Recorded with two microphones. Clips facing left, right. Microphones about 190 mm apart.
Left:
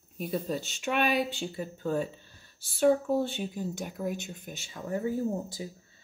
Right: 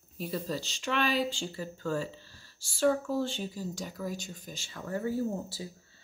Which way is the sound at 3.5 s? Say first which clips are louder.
Left 3 dB; 55° left (ahead or behind).